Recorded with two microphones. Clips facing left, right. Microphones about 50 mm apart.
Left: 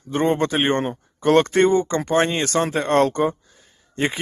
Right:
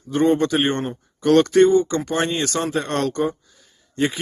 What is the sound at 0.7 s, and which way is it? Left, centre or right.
Speech, left.